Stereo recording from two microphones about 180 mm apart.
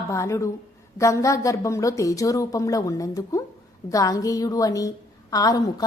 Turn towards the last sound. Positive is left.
turn(degrees=20)  # may be behind; listen again after turning